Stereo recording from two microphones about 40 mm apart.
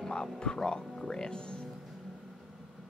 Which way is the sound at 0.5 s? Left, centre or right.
Centre.